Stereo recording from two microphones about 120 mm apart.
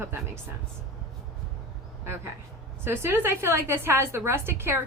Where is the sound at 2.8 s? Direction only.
20° right (ahead or behind).